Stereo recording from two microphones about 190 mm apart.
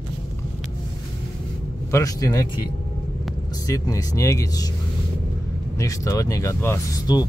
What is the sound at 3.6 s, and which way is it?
Speech, 20° left (ahead or behind).